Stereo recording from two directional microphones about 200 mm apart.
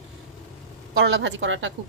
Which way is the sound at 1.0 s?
65° right (ahead or behind).